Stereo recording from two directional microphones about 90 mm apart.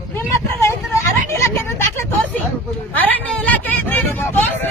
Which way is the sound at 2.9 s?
20° left (ahead or behind).